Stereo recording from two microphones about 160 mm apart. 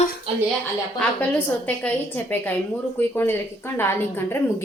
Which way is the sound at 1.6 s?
10° left (ahead or behind).